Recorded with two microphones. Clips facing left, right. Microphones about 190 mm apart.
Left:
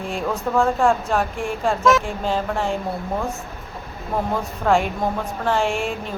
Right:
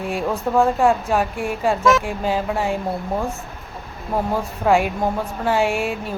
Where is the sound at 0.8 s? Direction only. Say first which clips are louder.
Right 1 dB; 5° right (ahead or behind).